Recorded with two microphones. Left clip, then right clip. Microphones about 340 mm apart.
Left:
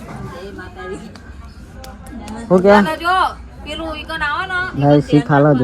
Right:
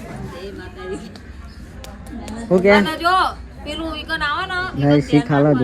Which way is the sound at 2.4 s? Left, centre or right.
Left.